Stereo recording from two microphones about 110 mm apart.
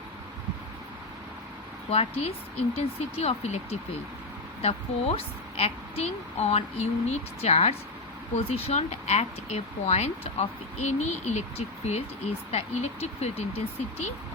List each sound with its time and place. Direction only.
1.9 s a woman's voice: 70° left (ahead or behind)